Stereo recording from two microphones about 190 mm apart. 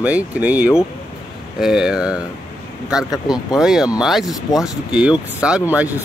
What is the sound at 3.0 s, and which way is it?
Speech, 20° left (ahead or behind).